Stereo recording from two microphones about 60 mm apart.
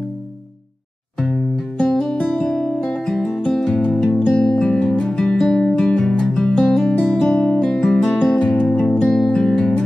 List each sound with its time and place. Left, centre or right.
1.2 s music: centre
4.4 s music: centre
7.0 s guitar: centre
8.0 s music: centre
8.5 s music: centre